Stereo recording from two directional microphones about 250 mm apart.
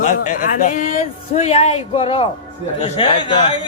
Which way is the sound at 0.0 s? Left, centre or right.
Left.